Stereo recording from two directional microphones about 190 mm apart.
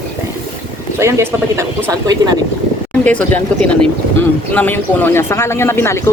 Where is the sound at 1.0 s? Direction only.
15° right (ahead or behind).